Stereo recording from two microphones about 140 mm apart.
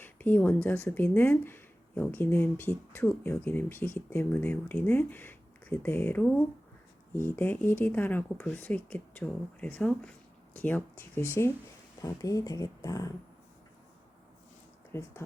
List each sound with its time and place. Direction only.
0.0 s speech: 15° left (ahead or behind)
14.9 s speech: 20° left (ahead or behind)